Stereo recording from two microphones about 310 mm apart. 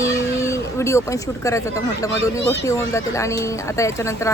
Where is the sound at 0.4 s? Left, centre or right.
Centre.